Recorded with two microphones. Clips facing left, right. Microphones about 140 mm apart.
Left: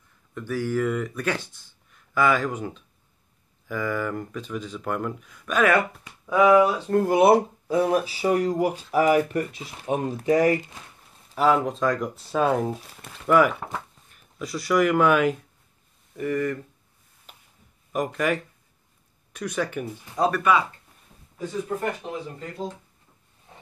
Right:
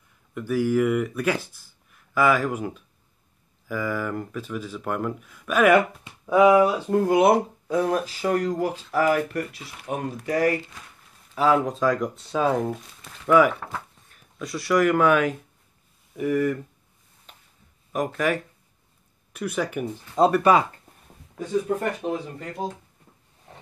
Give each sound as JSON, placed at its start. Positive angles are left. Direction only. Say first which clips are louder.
{"t": 0.3, "sound": "speech", "louder": "right 4 dB", "side_deg": -10}
{"t": 6.9, "sound": "speech", "louder": "left 2 dB", "side_deg": 0}
{"t": 11.3, "sound": "speech", "louder": "even", "side_deg": 0}
{"t": 17.3, "sound": "a sound", "louder": "even", "side_deg": 5}
{"t": 17.9, "sound": "speech", "louder": "even", "side_deg": 0}
{"t": 19.8, "sound": "speech", "louder": "right 6 dB", "side_deg": -20}